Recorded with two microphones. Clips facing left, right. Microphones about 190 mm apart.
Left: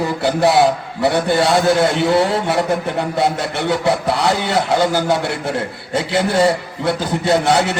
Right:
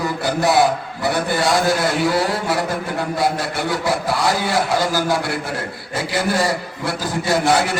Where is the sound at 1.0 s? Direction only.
25° left (ahead or behind).